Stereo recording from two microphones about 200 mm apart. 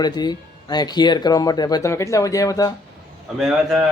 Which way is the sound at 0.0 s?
20° left (ahead or behind).